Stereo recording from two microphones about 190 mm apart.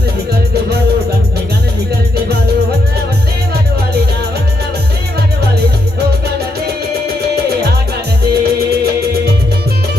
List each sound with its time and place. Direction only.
8.3 s music: 55° right (ahead or behind)